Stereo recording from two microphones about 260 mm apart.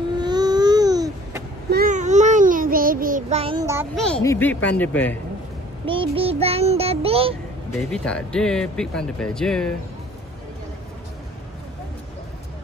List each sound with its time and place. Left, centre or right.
0.2 s a sound: centre
1.7 s child singing: right; by 3.8 s centre
3.9 s speech: centre
5.9 s child singing: right
7.9 s speech: centre